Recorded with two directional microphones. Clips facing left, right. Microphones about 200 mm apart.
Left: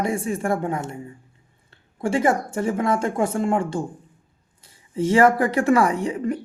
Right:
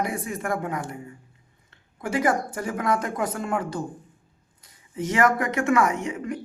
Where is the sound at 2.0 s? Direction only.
25° left (ahead or behind).